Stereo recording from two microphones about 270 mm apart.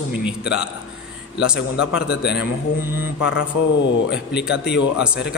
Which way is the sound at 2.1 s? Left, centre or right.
Left.